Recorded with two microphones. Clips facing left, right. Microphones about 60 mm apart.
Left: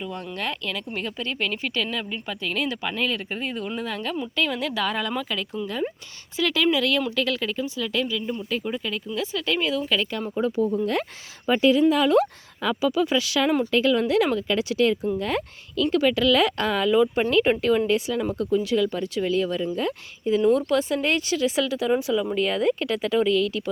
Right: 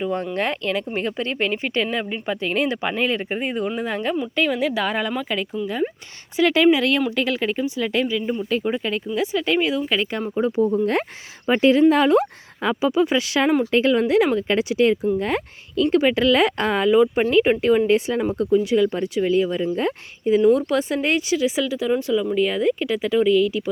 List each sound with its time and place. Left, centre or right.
0.0 s speech: right
4.4 s speech: centre
6.3 s speech: right
8.4 s speech: right
9.1 s speech: right
11.5 s speech: right
12.1 s speech: right
14.3 s speech: right
14.6 s speech: right
17.9 s speech: right
18.5 s speech: right
19.7 s speech: right; by 23.6 s centre